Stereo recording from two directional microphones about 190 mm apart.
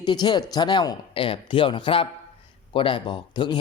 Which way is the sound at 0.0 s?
25° left (ahead or behind).